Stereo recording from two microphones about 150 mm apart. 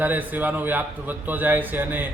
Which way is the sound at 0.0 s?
10° right (ahead or behind).